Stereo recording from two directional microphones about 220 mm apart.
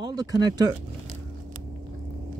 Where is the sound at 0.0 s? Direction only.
20° right (ahead or behind).